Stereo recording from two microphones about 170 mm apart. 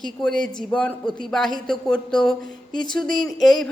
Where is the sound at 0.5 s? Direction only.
5° left (ahead or behind).